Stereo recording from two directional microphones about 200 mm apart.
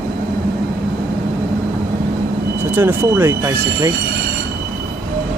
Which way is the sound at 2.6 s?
10° right (ahead or behind).